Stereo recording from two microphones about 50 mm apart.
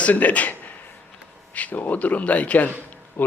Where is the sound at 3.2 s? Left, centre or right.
Left.